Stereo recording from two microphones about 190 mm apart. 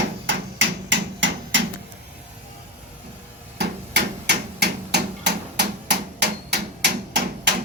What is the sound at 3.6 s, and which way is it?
Hammer, 60° right (ahead or behind).